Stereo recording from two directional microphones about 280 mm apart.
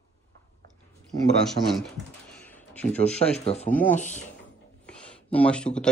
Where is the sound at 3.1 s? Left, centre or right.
Left.